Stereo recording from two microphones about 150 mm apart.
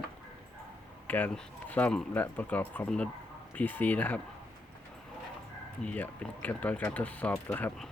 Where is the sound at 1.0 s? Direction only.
10° left (ahead or behind).